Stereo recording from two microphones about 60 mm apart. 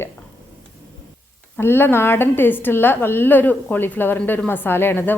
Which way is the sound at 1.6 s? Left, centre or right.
Left.